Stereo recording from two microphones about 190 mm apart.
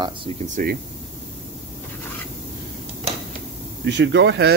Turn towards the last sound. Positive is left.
turn(degrees=-65)  # may be behind; listen again after turning